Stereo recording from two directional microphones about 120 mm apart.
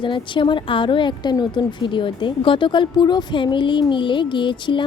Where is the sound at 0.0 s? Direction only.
45° left (ahead or behind).